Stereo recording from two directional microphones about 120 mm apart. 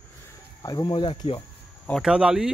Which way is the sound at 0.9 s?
45° left (ahead or behind).